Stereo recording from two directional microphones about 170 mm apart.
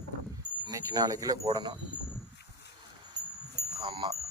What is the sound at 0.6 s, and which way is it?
Speech, 20° right (ahead or behind).